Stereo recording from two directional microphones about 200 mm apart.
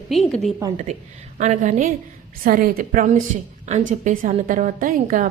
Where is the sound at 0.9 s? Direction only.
35° right (ahead or behind).